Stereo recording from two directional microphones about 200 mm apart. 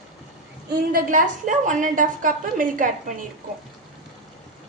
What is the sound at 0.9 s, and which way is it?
A woman's voice, 45° right (ahead or behind).